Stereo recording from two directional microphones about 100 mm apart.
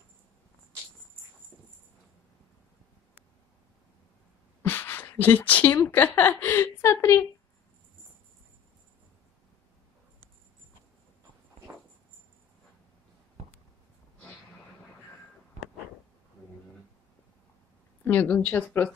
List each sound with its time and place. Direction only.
4.6 s a sound: 20° left (ahead or behind)
5.9 s a woman's voice: 20° left (ahead or behind)
18.0 s a woman's voice: 20° left (ahead or behind)